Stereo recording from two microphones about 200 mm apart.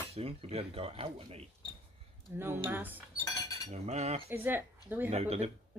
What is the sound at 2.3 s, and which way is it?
Speech, 10° right (ahead or behind).